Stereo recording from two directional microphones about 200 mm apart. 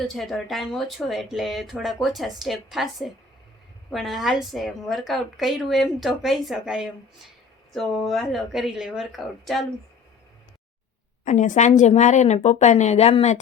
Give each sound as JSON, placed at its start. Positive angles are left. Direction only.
{"t": 0.0, "sound": "speech", "side_deg": 0}
{"t": 11.3, "sound": "a woman's voice", "side_deg": 40}